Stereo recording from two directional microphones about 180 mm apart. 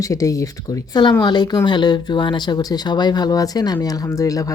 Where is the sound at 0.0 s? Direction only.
20° left (ahead or behind).